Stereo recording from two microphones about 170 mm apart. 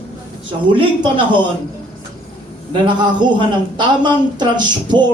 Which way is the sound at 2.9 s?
25° right (ahead or behind).